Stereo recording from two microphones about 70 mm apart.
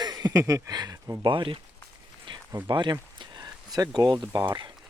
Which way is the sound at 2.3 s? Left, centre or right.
Right.